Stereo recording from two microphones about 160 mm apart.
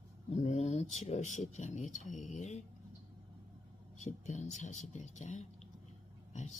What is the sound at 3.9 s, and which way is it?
Speech, 50° left (ahead or behind).